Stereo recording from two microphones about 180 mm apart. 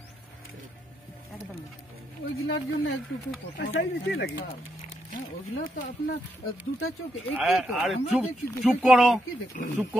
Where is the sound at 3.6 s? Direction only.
85° left.